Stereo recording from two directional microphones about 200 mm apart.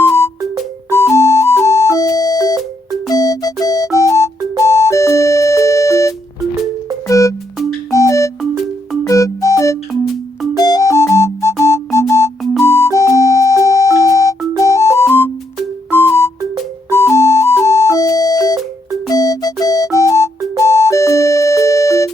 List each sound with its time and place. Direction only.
0.0 s music: 10° left (ahead or behind)